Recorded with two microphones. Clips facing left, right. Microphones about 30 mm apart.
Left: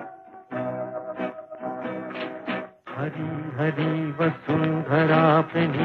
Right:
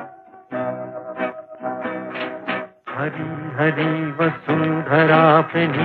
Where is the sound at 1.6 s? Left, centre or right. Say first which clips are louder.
Right 5 dB; right.